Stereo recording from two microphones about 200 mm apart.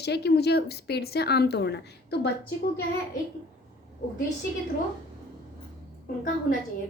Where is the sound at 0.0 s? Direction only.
55° left (ahead or behind).